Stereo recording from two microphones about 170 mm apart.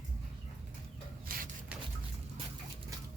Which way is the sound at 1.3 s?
60° right (ahead or behind).